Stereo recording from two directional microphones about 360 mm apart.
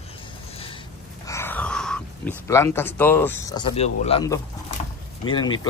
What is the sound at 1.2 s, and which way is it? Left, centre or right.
Speech, centre.